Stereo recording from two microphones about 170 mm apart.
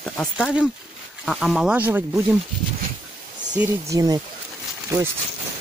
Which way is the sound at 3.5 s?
10° right (ahead or behind).